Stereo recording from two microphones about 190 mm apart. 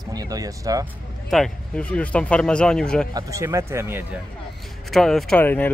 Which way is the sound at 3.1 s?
15° right (ahead or behind).